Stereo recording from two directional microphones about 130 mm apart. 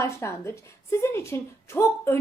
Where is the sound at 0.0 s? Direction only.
20° left (ahead or behind).